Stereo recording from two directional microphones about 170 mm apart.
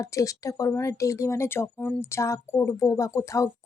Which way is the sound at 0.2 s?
20° left (ahead or behind).